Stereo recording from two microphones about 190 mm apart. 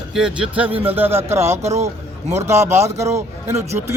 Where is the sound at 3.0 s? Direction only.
15° right (ahead or behind).